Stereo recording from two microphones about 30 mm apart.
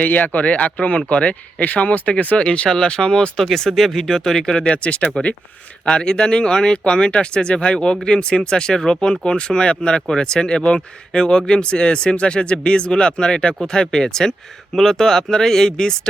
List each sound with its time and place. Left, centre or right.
0.0 s speech: left
0.4 s speech: left
1.6 s speech: left
3.3 s speech: centre
4.7 s speech: left
5.8 s speech: left